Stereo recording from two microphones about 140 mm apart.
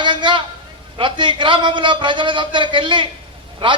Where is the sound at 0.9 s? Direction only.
35° right (ahead or behind).